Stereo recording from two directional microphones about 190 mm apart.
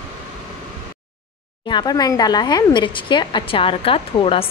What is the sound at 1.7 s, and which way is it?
Speech, 20° left (ahead or behind).